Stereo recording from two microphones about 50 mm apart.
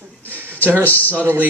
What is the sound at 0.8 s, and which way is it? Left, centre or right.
Speech, left.